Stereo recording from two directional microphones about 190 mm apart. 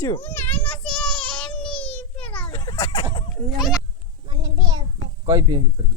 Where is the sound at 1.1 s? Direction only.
25° left (ahead or behind).